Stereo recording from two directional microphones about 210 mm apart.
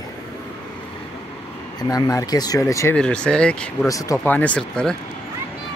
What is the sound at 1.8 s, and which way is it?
Speech, 15° left (ahead or behind).